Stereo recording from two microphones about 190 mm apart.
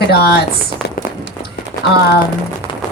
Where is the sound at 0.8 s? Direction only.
65° left (ahead or behind).